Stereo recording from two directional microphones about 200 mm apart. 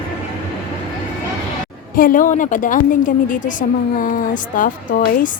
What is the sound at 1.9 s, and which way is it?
A woman's voice, 45° left (ahead or behind).